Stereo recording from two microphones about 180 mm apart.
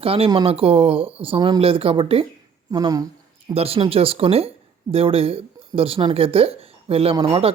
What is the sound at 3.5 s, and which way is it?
Speech, 35° right (ahead or behind).